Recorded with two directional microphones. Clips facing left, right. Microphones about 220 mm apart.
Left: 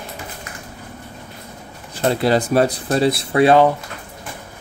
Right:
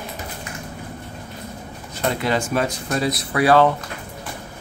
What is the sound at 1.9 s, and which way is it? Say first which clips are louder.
Speech: left 5 dB; 35° left (ahead or behind).